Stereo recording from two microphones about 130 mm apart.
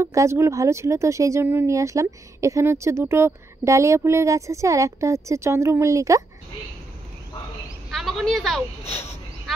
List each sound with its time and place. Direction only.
0.0 s speech: 20° right (ahead or behind)
7.9 s a woman's voice: centre (ahead or behind)